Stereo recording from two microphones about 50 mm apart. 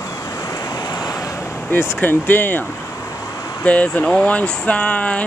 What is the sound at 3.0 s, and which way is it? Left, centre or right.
Vehicle, left.